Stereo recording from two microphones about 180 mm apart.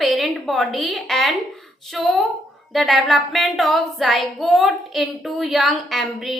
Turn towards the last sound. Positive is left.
turn(degrees=0)  # may be behind; listen again after turning